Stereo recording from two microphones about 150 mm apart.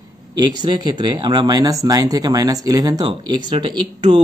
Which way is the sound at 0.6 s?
30° right (ahead or behind).